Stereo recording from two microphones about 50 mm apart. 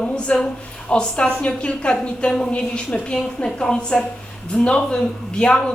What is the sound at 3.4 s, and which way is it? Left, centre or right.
A woman's voice, centre.